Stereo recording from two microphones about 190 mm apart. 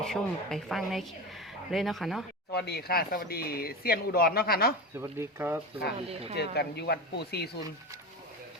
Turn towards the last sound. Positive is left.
turn(degrees=60)  # may be behind; listen again after turning